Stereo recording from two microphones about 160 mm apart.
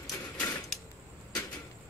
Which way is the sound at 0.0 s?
20° left (ahead or behind).